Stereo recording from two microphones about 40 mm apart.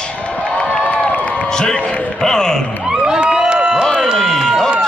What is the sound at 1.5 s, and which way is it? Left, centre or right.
A man's voice, left.